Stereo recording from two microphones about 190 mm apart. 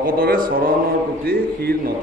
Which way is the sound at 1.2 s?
55° right (ahead or behind).